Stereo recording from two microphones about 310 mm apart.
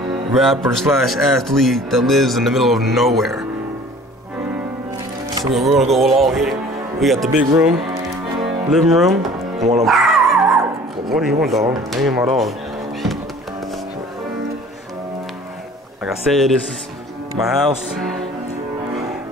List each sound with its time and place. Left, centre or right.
0.3 s speech: centre
5.4 s speech: centre
9.6 s speech: right
9.8 s dog: centre
11.1 s speech: centre
16.0 s speech: centre
17.6 s speech: centre